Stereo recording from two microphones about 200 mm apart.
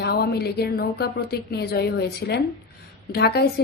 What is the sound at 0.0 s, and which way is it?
A woman's voice, 50° left (ahead or behind).